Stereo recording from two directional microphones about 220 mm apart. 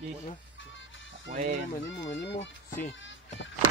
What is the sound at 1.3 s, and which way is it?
Speech, 35° right (ahead or behind).